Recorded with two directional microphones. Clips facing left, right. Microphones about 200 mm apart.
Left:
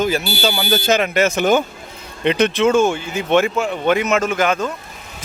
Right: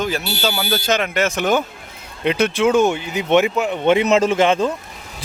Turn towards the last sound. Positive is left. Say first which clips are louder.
# right 3 dB
turn(degrees=-25)  # may be behind; listen again after turning